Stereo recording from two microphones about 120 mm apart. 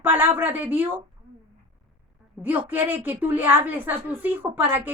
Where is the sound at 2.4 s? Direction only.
15° right (ahead or behind).